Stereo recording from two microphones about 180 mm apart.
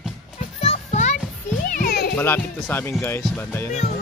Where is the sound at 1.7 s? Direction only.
55° left (ahead or behind).